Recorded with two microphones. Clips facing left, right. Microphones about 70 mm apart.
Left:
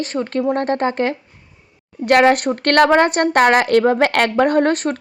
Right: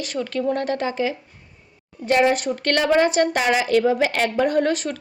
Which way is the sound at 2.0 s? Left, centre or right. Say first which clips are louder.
Left 5 dB; left.